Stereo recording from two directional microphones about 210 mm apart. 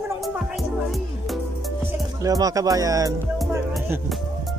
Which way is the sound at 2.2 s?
15° right (ahead or behind).